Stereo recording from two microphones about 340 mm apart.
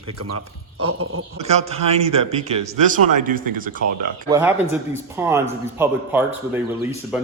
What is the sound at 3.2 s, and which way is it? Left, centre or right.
Speech, right.